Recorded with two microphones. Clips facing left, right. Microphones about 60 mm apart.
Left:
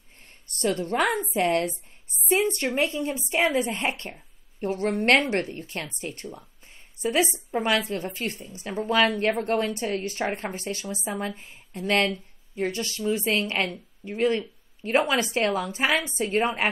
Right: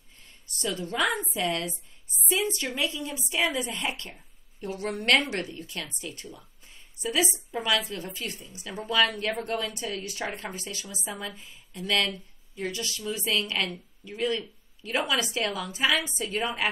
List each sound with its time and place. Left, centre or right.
0.2 s a woman's voice: left